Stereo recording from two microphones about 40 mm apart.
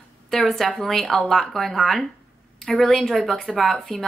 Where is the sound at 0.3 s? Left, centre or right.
Centre.